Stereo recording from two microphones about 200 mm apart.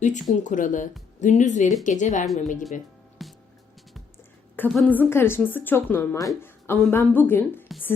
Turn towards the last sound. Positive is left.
turn(degrees=10)  # may be behind; listen again after turning